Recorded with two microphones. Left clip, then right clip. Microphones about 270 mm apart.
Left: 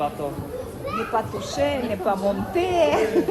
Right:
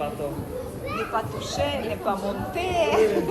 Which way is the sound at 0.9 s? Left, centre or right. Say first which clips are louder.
Left 3 dB; left.